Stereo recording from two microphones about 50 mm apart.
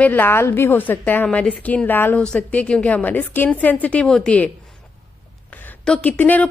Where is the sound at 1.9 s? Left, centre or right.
Left.